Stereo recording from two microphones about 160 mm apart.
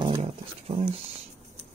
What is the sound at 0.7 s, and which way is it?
Speech, 40° right (ahead or behind).